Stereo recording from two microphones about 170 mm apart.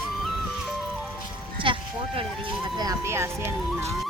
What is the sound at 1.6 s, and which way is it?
Music, 30° right (ahead or behind).